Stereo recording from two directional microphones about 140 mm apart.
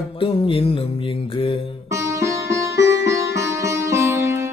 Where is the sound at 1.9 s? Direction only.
20° right (ahead or behind).